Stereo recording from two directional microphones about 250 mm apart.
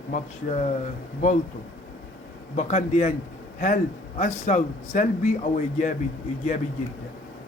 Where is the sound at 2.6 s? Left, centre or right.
Left.